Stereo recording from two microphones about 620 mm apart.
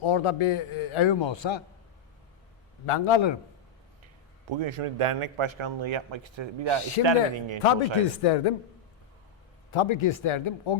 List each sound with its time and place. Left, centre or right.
0.0 s a man's voice: left
2.8 s a man's voice: left
4.0 s a man's voice: right
7.6 s a man's voice: left
9.7 s a man's voice: left